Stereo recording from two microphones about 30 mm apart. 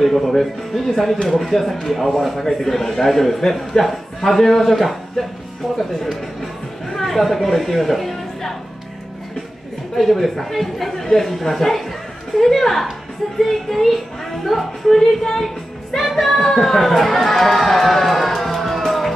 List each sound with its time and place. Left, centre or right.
0.0 s a woman's voice: centre
9.9 s a woman's voice: centre
15.3 s music: centre
16.6 s speech: centre
18.9 s music: centre